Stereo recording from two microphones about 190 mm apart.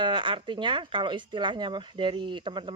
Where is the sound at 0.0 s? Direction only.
25° right (ahead or behind).